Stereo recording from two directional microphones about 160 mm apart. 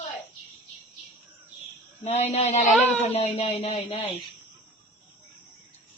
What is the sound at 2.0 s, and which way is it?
A man's voice, 45° left (ahead or behind).